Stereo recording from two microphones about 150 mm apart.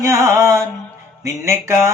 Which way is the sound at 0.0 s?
20° right (ahead or behind).